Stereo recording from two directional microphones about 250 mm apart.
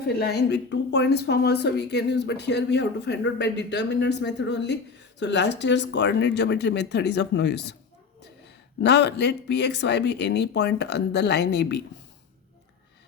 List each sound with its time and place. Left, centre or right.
0.2 s speech: left
8.8 s speech: left